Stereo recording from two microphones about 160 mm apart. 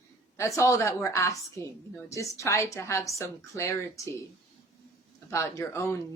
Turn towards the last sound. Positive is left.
turn(degrees=15)  # may be behind; listen again after turning